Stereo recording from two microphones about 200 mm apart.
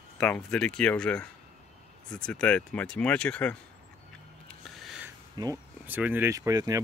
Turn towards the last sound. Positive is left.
turn(degrees=-15)  # may be behind; listen again after turning